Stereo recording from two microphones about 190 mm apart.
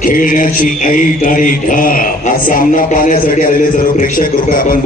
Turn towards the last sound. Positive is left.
turn(degrees=50)  # may be behind; listen again after turning